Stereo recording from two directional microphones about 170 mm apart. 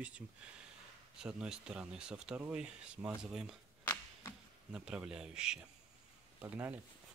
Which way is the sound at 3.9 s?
20° left (ahead or behind).